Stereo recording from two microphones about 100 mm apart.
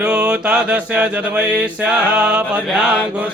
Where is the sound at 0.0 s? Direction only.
10° right (ahead or behind).